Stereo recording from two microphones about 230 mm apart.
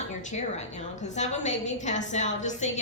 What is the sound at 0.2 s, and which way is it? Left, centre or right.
A woman's voice, left.